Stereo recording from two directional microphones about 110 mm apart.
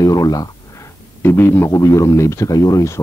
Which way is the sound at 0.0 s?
35° left (ahead or behind).